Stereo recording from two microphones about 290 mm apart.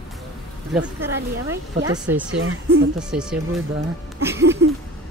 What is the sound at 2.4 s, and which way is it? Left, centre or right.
Speech, right.